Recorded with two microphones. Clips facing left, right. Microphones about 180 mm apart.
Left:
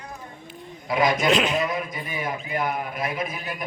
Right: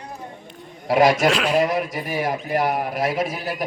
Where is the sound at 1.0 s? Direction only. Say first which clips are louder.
Right 3 dB; 90° right.